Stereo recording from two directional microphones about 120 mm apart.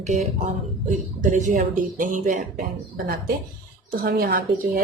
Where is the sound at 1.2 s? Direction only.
90° right.